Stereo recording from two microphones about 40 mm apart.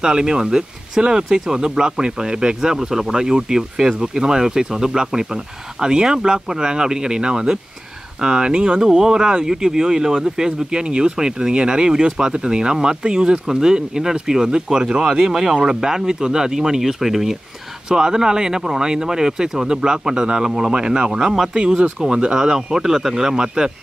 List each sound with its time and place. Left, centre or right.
0.0 s speech: centre
22.3 s speech: centre